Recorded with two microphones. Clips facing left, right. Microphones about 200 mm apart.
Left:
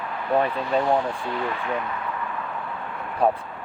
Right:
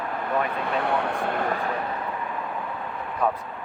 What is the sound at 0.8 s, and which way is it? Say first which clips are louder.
Speech: left 3 dB; 65° right (ahead or behind).